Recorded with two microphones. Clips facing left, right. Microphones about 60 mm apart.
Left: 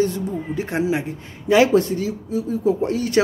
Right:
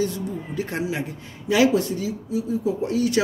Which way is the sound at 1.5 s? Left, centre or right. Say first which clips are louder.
Left 4 dB; left.